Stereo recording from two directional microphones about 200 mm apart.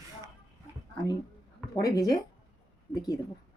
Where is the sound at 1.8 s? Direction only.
15° left (ahead or behind).